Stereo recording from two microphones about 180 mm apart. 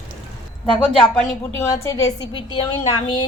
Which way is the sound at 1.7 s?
15° left (ahead or behind).